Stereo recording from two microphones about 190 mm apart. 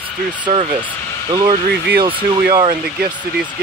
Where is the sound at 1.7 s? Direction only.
55° right (ahead or behind).